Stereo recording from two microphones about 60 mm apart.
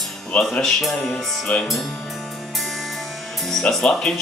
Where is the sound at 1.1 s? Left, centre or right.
Left.